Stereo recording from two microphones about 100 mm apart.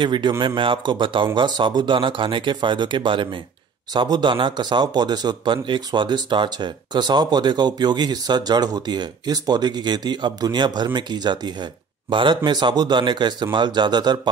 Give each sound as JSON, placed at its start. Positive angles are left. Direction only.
{"t": 0.0, "sound": "speech", "side_deg": -50}